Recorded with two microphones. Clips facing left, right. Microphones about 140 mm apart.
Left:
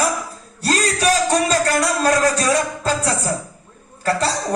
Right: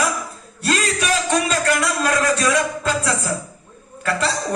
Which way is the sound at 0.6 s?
35° left (ahead or behind).